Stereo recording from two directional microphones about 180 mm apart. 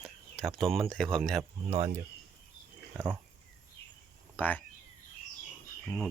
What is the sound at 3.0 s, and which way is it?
Speech, 10° right (ahead or behind).